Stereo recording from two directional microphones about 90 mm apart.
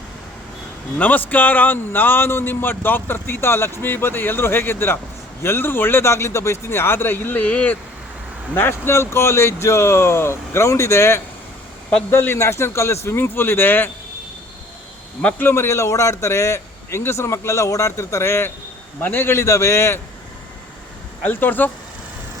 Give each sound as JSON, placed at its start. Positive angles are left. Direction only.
{"t": 0.9, "sound": "a man's voice", "side_deg": 20}
{"t": 15.2, "sound": "a man's voice", "side_deg": 20}
{"t": 21.2, "sound": "speech", "side_deg": 20}